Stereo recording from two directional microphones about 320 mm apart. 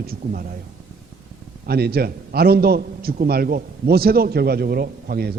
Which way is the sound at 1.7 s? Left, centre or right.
Right.